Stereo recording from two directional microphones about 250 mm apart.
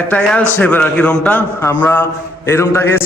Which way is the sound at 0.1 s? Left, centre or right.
Centre.